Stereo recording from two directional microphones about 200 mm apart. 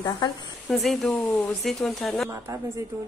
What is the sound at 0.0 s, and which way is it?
Speech, 20° left (ahead or behind).